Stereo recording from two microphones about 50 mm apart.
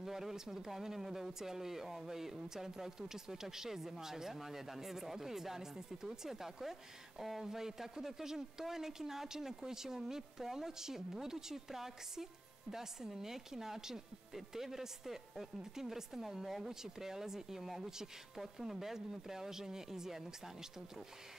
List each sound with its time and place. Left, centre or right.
0.0 s speech: centre